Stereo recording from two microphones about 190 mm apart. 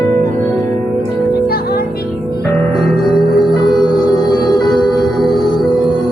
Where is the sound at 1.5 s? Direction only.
55° left (ahead or behind).